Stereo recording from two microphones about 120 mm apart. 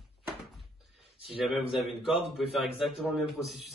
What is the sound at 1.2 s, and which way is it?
Speech, centre (ahead or behind).